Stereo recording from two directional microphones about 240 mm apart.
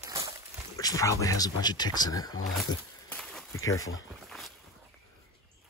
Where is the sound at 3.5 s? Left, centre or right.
Centre.